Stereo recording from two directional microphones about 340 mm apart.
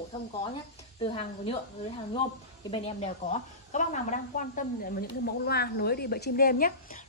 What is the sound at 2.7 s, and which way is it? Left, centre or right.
Speech, centre.